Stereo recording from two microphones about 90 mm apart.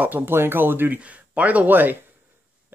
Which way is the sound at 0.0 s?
20° right (ahead or behind).